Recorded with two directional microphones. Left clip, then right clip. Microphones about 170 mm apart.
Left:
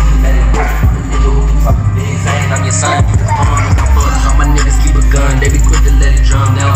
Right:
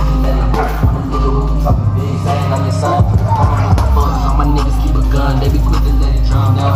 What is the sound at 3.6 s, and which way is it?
Music, 45° right (ahead or behind).